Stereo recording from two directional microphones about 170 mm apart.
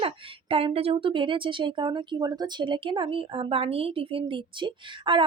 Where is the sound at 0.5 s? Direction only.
35° right (ahead or behind).